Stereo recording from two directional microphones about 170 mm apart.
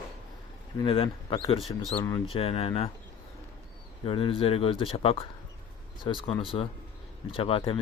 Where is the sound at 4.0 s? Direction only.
30° left (ahead or behind).